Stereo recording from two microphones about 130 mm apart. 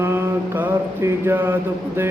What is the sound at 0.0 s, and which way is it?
Mantra, 20° right (ahead or behind).